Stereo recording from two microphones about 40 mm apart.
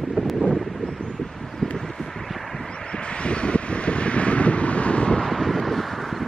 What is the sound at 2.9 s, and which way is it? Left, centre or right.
Wind, left.